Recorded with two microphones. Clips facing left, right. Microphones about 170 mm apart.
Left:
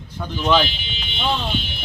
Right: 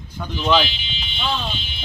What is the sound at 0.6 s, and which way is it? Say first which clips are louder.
Speech: left 1 dB; 50° left (ahead or behind).